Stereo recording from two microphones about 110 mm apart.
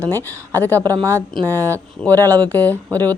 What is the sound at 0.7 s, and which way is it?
Speech, 30° right (ahead or behind).